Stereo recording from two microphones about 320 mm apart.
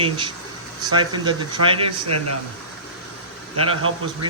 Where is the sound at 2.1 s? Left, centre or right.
Right.